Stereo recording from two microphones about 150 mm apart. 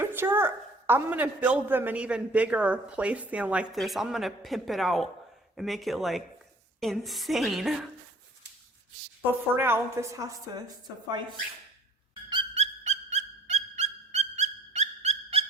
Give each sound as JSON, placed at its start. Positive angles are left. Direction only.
{"t": 0.0, "sound": "a woman's voice", "side_deg": -15}
{"t": 9.6, "sound": "a woman's voice", "side_deg": -15}
{"t": 12.5, "sound": "a sound", "side_deg": -50}